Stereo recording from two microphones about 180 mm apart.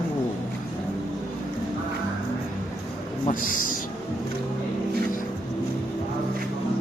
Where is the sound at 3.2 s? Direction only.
50° left (ahead or behind).